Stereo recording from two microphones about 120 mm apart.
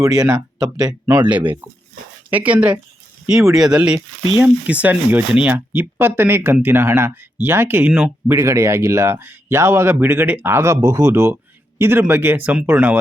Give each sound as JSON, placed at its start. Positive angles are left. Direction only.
{"t": 0.0, "sound": "speech", "side_deg": -30}
{"t": 0.3, "sound": "speech", "side_deg": -10}
{"t": 8.4, "sound": "speech", "side_deg": -25}